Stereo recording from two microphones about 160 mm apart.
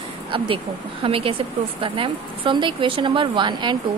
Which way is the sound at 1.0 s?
35° right (ahead or behind).